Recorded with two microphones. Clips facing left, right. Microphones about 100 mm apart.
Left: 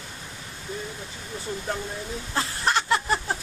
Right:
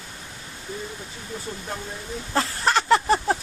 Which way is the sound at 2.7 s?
90° right.